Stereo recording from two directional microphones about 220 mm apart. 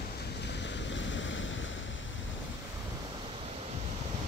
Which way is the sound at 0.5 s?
55° left (ahead or behind).